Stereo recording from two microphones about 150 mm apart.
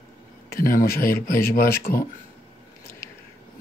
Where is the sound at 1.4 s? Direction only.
85° left.